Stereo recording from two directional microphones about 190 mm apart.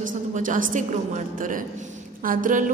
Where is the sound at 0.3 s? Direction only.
45° right (ahead or behind).